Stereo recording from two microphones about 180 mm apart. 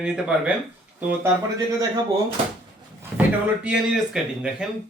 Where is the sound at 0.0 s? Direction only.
5° right (ahead or behind).